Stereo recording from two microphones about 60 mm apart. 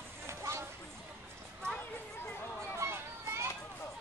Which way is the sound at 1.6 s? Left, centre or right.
Right.